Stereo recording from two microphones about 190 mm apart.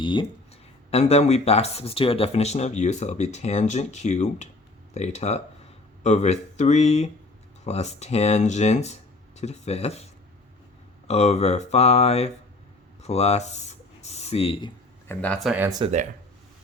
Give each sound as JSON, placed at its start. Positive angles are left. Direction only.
{"t": 0.0, "sound": "speech", "side_deg": 25}
{"t": 11.1, "sound": "speech", "side_deg": 35}
{"t": 13.0, "sound": "a sound", "side_deg": 35}
{"t": 15.0, "sound": "speech", "side_deg": 10}